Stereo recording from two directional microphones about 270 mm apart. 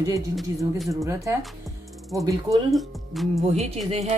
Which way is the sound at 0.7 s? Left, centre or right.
Centre.